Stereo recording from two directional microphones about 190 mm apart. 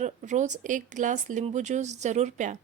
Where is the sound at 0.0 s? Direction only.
40° right (ahead or behind).